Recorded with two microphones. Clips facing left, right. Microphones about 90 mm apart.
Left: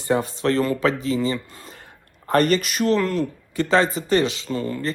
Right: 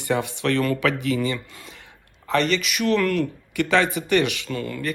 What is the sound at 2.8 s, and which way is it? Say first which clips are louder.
Speech: right 1 dB; 20° left (ahead or behind).